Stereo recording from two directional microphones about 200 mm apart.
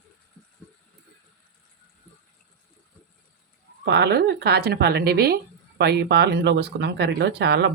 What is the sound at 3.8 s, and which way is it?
Speech, 55° right (ahead or behind).